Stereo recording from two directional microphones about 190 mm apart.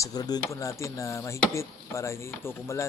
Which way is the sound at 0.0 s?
20° left (ahead or behind).